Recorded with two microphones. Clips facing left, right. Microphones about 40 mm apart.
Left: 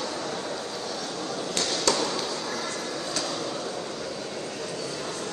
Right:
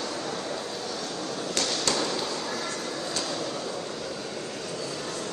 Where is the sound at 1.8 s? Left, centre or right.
Left.